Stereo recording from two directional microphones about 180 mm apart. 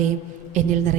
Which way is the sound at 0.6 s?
40° right (ahead or behind).